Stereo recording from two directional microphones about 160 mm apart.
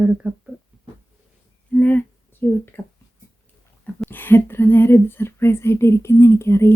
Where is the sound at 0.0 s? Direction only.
5° right (ahead or behind).